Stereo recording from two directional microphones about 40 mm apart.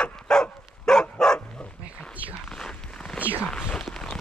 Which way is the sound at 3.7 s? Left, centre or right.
Centre.